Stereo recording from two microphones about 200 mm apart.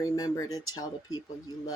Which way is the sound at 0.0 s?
15° left (ahead or behind).